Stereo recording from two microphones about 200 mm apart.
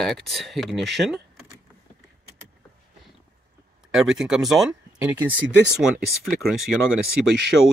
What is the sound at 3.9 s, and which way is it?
Speech, 5° right (ahead or behind).